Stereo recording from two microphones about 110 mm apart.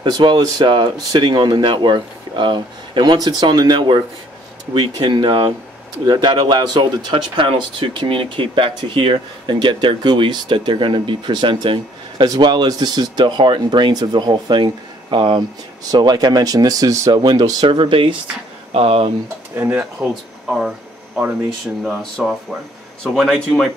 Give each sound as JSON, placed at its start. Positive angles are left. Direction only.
{"t": 0.0, "sound": "speech", "side_deg": -40}
{"t": 18.7, "sound": "speech", "side_deg": -65}
{"t": 19.5, "sound": "speech", "side_deg": -20}
{"t": 20.0, "sound": "speech", "side_deg": 0}
{"t": 22.2, "sound": "speech", "side_deg": -5}